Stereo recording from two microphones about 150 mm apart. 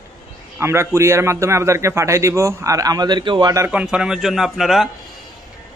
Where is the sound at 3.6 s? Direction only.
5° right (ahead or behind).